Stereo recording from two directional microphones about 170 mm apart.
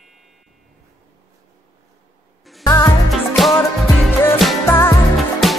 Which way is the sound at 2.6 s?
20° left (ahead or behind).